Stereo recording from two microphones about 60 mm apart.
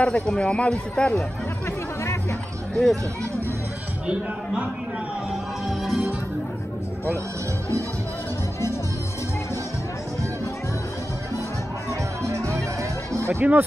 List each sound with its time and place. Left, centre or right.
0.0 s a man's voice: centre
2.7 s speech: centre
5.3 s music: centre
12.2 s music: right
13.4 s speech: right